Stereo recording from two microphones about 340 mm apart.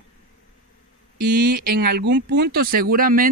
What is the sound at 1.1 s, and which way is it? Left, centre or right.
Speech, right.